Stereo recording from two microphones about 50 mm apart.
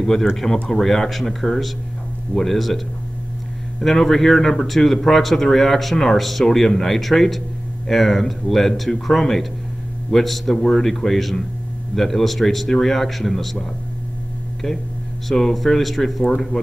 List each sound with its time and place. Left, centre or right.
0.0 s speech: centre
3.8 s speech: centre
15.2 s speech: centre